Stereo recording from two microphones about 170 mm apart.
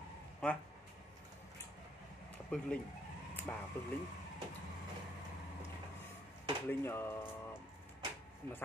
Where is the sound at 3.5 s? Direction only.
10° left (ahead or behind).